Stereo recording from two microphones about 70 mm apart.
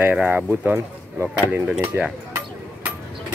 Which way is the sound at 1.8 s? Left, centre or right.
Right.